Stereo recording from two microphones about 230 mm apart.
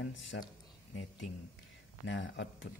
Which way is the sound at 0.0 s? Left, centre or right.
Left.